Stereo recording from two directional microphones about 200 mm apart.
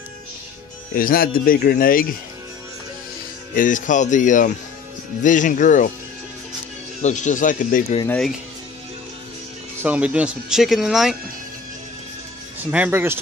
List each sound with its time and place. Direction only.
0.9 s speech: 45° left (ahead or behind)
3.5 s speech: 40° left (ahead or behind)
7.0 s speech: 35° left (ahead or behind)
8.1 s speech: centre (ahead or behind)
9.8 s speech: 5° right (ahead or behind)
12.7 s speech: 10° right (ahead or behind)